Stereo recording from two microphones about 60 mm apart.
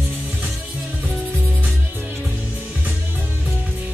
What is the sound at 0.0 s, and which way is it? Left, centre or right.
Music, right.